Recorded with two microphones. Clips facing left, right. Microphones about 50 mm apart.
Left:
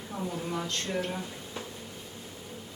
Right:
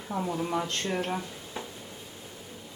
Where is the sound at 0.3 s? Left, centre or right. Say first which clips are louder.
Right 3 dB; centre.